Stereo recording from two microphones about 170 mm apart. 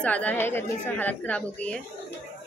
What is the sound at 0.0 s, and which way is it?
A woman's voice, 10° left (ahead or behind).